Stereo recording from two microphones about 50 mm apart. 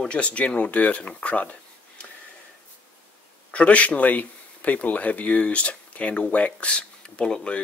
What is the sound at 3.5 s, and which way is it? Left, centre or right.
Speech, left.